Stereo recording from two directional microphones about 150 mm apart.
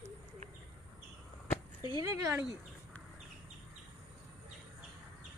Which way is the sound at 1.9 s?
20° right (ahead or behind).